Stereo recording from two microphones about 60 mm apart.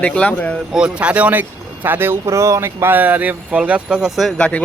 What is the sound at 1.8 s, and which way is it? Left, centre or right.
Speech, right.